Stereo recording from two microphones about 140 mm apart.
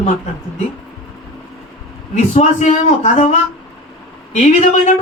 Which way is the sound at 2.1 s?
55° left (ahead or behind).